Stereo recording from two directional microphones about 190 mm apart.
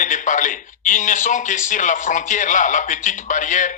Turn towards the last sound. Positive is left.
turn(degrees=40)  # may be behind; listen again after turning